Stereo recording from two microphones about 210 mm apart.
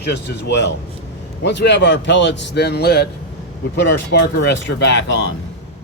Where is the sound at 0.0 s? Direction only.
50° left (ahead or behind).